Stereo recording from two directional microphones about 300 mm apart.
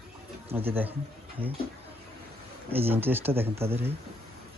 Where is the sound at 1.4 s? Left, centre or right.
Centre.